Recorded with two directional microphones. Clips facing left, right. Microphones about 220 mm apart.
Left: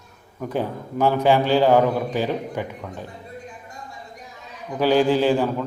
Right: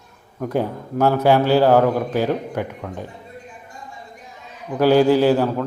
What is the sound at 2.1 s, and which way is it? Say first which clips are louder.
Speech: right 3 dB; 10° left (ahead or behind).